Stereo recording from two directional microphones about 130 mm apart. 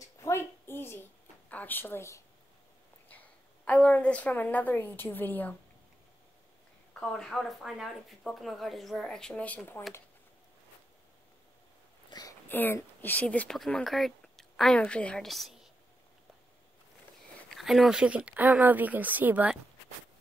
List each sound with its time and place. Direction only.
0.0 s a sound: 20° left (ahead or behind)
1.5 s a woman's voice: 15° left (ahead or behind)
6.9 s speech: 5° left (ahead or behind)
12.1 s whispering: 30° left (ahead or behind)
12.4 s speech: 15° left (ahead or behind)
17.5 s speech: centre (ahead or behind)